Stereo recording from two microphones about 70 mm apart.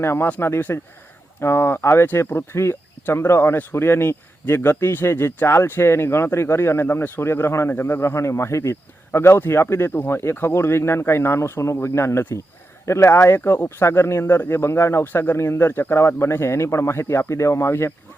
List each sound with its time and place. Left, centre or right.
0.0 s speech: left